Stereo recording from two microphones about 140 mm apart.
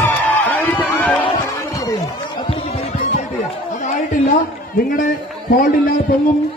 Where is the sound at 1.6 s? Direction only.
25° left (ahead or behind).